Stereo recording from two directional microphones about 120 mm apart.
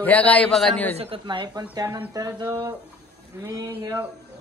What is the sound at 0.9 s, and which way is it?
Speech, 60° right (ahead or behind).